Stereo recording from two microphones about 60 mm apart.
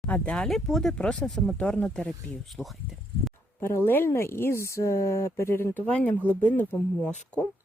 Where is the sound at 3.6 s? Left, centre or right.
Left.